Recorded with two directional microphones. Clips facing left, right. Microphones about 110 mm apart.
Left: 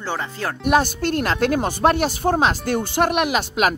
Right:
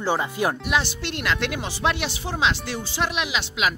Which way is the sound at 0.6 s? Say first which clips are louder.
Left 7 dB; 45° left (ahead or behind).